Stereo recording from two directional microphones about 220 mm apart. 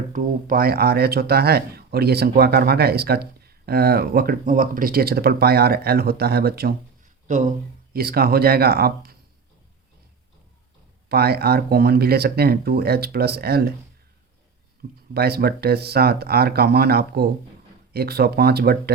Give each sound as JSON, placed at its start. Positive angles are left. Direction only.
{"t": 0.1, "sound": "speech", "side_deg": -40}
{"t": 11.1, "sound": "speech", "side_deg": -45}
{"t": 15.1, "sound": "speech", "side_deg": -45}